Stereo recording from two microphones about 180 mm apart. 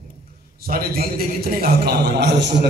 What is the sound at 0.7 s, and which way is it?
A man's voice, 55° right (ahead or behind).